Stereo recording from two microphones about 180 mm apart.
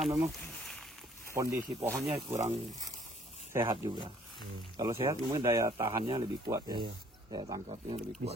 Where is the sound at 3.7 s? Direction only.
25° right (ahead or behind).